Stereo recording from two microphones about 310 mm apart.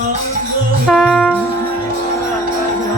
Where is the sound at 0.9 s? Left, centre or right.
Centre.